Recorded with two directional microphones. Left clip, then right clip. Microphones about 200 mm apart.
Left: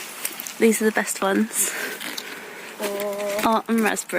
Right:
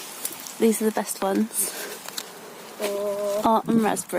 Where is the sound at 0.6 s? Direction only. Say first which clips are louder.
Left 3 dB; centre (ahead or behind).